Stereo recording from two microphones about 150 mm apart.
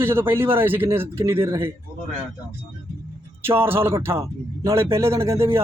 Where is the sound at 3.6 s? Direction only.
15° right (ahead or behind).